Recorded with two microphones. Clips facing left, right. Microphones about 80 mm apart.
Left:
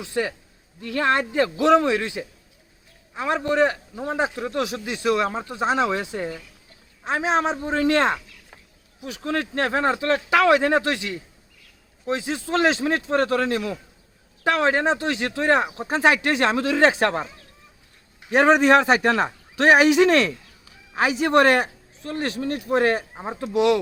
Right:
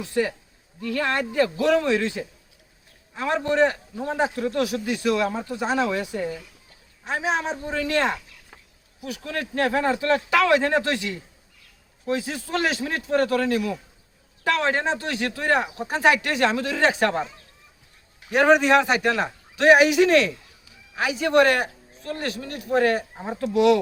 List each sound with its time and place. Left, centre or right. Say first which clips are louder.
0.9 s a man's voice: left 2 dB; left
9.0 s a man's voice: left 4 dB; left
18.3 s a man's voice: left 1 dB; left